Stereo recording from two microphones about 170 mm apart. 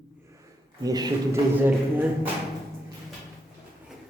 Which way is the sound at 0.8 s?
20° right (ahead or behind).